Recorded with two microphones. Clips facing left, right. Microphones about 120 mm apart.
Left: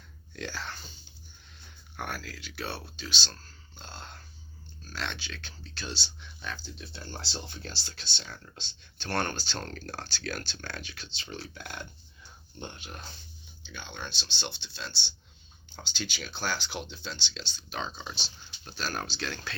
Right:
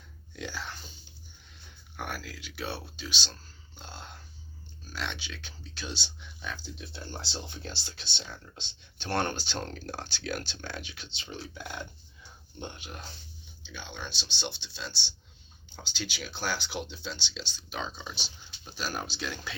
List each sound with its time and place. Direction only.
0.3 s speech: 10° right (ahead or behind)
2.0 s speech: 10° right (ahead or behind)
3.8 s a sound: 10° right (ahead or behind)
4.9 s speech: 10° right (ahead or behind)
15.7 s speech: 5° right (ahead or behind)